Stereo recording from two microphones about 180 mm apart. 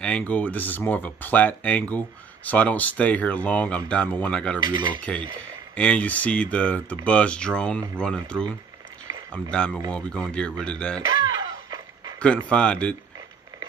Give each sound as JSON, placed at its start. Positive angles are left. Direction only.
{"t": 0.0, "sound": "speech", "side_deg": 5}
{"t": 4.6, "sound": "speech", "side_deg": -25}
{"t": 5.8, "sound": "speech", "side_deg": 5}
{"t": 11.2, "sound": "a sound", "side_deg": -20}
{"t": 12.2, "sound": "speech", "side_deg": 5}